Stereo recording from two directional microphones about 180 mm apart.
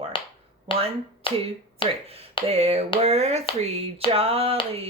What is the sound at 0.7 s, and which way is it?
Speech, 30° left (ahead or behind).